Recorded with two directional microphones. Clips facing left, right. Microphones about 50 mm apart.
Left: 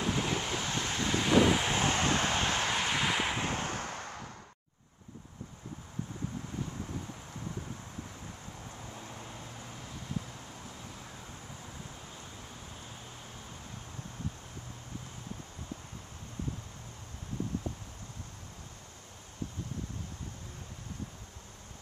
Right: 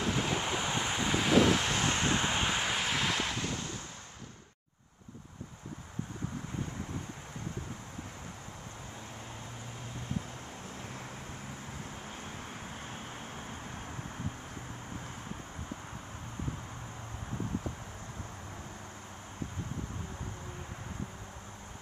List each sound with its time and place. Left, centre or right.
0.0 s vehicle: centre
1.8 s vehicle: left
2.0 s vehicle: right; by 3.3 s centre
3.3 s a sound: left